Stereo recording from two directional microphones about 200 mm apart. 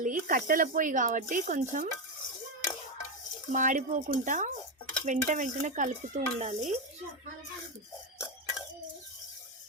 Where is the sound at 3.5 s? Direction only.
40° right (ahead or behind).